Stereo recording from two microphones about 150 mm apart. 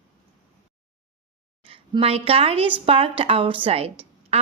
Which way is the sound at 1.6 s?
35° right (ahead or behind).